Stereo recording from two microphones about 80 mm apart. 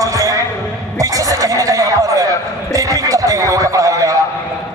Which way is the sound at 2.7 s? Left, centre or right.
Right.